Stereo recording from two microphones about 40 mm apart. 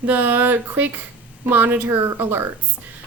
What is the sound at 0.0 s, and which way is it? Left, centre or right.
A woman's voice, right.